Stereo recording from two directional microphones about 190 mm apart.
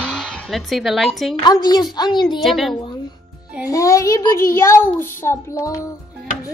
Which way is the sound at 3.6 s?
15° left (ahead or behind).